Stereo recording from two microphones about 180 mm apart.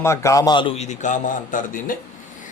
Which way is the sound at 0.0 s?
15° left (ahead or behind).